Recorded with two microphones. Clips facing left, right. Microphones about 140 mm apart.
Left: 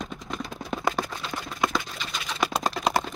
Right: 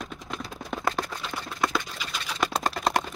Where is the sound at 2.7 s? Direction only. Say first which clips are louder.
Left 1 dB; 5° left (ahead or behind).